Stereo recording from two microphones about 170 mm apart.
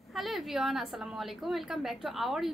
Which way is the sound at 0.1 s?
Centre (ahead or behind).